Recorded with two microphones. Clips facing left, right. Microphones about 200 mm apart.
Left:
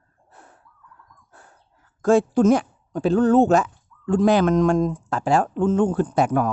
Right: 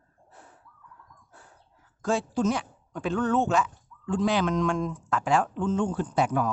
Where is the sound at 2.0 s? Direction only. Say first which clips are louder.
Left 10 dB; 50° left (ahead or behind).